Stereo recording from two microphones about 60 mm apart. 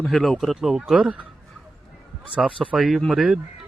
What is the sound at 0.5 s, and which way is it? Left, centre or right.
Speech, centre.